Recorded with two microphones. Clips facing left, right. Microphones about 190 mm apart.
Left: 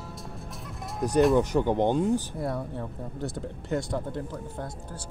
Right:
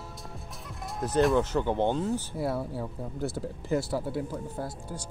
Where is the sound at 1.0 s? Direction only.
15° left (ahead or behind).